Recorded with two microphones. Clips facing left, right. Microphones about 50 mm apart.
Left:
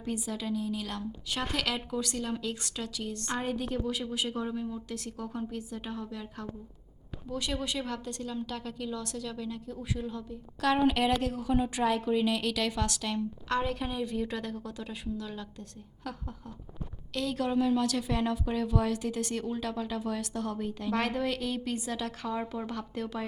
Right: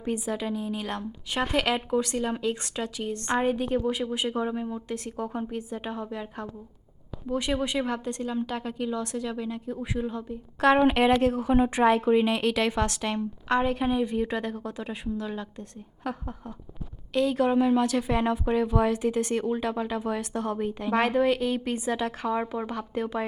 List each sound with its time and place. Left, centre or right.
0.0 s a woman's voice: right